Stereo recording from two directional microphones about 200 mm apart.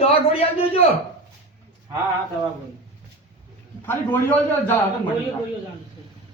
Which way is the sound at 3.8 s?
10° left (ahead or behind).